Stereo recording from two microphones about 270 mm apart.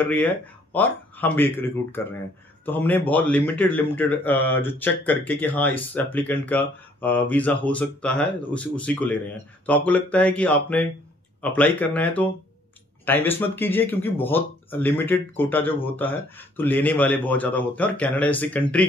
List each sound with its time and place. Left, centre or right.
0.0 s a man's voice: centre